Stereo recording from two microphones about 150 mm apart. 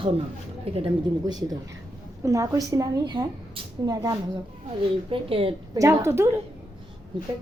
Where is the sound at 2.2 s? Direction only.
20° right (ahead or behind).